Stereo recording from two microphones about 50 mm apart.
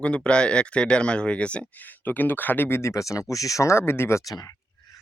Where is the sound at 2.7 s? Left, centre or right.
Left.